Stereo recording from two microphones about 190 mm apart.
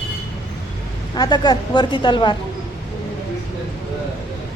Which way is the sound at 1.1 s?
20° left (ahead or behind).